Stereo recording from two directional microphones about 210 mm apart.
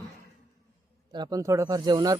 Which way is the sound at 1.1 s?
20° right (ahead or behind).